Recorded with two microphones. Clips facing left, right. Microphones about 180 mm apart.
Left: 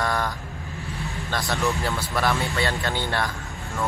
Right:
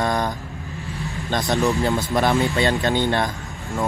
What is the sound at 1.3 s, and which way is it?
Speech, 20° right (ahead or behind).